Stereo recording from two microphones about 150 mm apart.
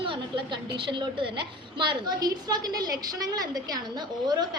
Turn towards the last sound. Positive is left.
turn(degrees=-25)  # may be behind; listen again after turning